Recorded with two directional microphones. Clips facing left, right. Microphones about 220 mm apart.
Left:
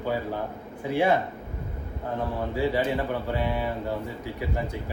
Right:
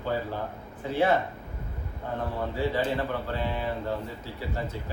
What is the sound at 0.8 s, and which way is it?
Speech, 10° left (ahead or behind).